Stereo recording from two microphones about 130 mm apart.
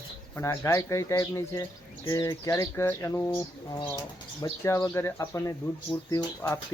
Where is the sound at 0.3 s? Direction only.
25° left (ahead or behind).